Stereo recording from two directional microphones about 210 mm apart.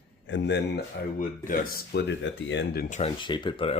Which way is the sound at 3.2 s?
20° left (ahead or behind).